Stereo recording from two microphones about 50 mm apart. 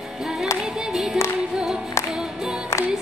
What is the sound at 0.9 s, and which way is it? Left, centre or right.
Music, centre.